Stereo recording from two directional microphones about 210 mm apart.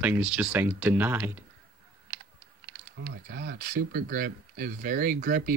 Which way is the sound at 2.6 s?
60° right (ahead or behind).